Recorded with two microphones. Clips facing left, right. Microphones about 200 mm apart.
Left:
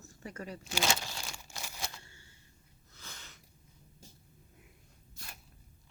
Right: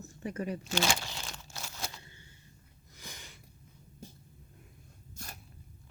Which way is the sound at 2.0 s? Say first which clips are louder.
Right 3 dB; 20° right (ahead or behind).